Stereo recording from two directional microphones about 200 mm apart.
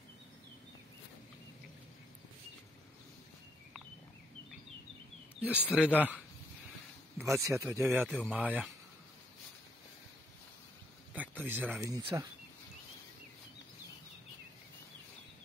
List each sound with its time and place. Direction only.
5.7 s speech: 5° right (ahead or behind)
7.2 s speech: 15° right (ahead or behind)
7.8 s speech: 5° right (ahead or behind)
11.1 s speech: 10° right (ahead or behind)
12.0 s speech: 20° right (ahead or behind)